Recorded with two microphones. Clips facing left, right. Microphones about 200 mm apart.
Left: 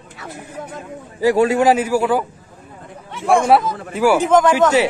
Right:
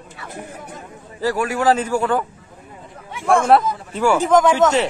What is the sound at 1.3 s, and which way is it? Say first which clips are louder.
Speech: left 7 dB; 25° left (ahead or behind).